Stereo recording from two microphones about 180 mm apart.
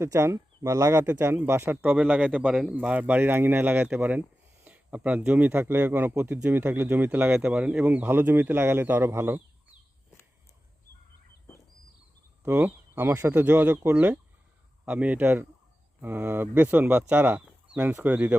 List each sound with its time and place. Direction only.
0.0 s speech: 15° right (ahead or behind)
12.4 s speech: 10° right (ahead or behind)